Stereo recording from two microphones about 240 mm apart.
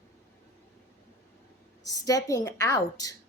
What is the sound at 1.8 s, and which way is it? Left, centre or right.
Speech, centre.